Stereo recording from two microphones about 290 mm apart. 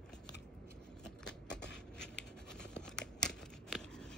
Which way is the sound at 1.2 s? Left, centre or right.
Centre.